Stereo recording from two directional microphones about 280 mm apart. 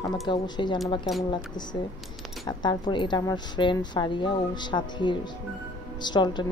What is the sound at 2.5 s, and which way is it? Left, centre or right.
Speech, centre.